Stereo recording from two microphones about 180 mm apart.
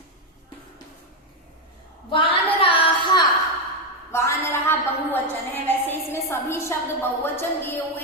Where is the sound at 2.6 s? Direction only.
30° left (ahead or behind).